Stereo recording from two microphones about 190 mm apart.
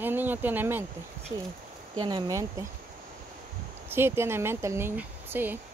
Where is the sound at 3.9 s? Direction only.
10° right (ahead or behind).